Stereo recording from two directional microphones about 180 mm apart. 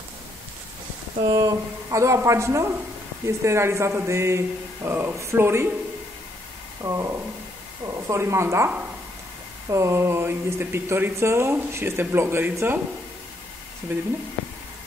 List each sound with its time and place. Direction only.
1.3 s speech: 20° right (ahead or behind)
6.8 s speech: 15° right (ahead or behind)